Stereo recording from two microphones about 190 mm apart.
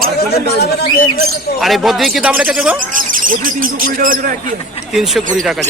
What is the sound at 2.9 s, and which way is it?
Speech, 45° right (ahead or behind).